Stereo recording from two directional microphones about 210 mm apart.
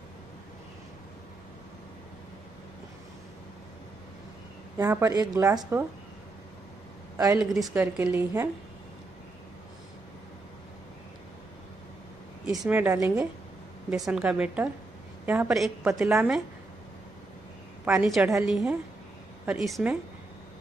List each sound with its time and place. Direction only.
4.7 s a woman's voice: 15° right (ahead or behind)
7.5 s a woman's voice: centre (ahead or behind)
7.8 s a woman's voice: 10° right (ahead or behind)
12.4 s a woman's voice: 5° right (ahead or behind)
13.8 s a woman's voice: centre (ahead or behind)
17.8 s a woman's voice: centre (ahead or behind)